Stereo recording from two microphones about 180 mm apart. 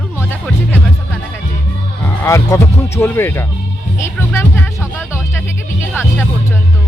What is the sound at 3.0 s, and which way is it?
Speech, 10° left (ahead or behind).